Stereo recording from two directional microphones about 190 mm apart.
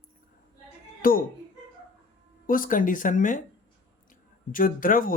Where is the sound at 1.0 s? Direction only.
45° left (ahead or behind).